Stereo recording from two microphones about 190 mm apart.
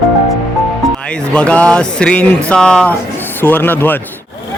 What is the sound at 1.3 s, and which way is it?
Music, 5° left (ahead or behind).